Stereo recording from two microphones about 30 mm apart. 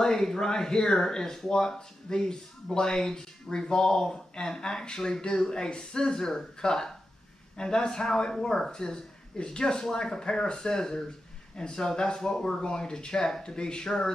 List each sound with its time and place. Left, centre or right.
0.0 s speech: centre
13.8 s speech: centre